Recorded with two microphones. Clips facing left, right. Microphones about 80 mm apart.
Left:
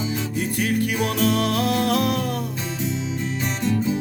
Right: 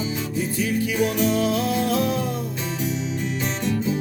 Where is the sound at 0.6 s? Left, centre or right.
Left.